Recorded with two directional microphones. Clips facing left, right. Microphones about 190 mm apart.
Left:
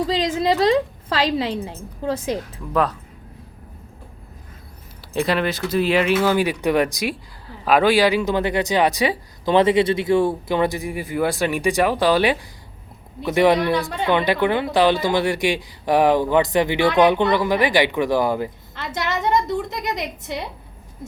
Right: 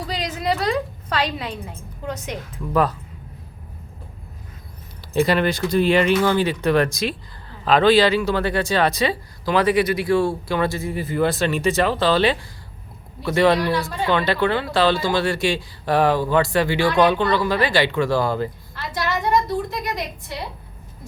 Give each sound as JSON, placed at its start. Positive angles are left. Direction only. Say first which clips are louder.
{"t": 0.1, "sound": "a woman's voice", "louder": "left 5 dB", "side_deg": 25}
{"t": 5.1, "sound": "speech", "louder": "right 2 dB", "side_deg": 0}
{"t": 18.9, "sound": "a sound", "louder": "even", "side_deg": 20}